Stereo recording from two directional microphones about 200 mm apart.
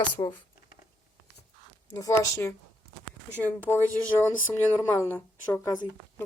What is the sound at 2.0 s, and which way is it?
Speech, 15° left (ahead or behind).